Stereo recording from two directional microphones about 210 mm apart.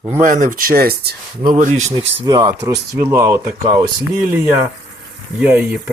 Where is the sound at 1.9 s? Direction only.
20° right (ahead or behind).